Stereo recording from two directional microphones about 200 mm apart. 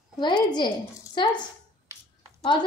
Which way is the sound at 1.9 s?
15° right (ahead or behind).